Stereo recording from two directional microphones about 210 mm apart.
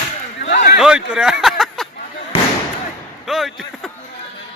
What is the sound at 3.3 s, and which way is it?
Speech, centre (ahead or behind).